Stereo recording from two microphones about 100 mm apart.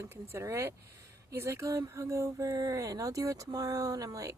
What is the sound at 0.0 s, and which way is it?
Speech, 25° right (ahead or behind).